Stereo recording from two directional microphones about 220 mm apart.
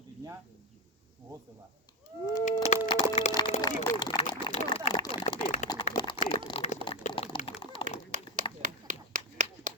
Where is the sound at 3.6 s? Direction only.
15° left (ahead or behind).